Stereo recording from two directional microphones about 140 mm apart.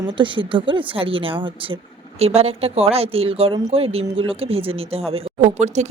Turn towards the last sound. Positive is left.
turn(degrees=-55)  # may be behind; listen again after turning